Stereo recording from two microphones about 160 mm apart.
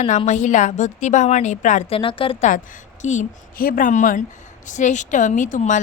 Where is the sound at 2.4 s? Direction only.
50° left (ahead or behind).